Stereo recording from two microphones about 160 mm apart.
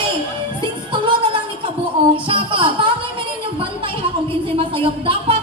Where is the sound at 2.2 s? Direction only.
35° right (ahead or behind).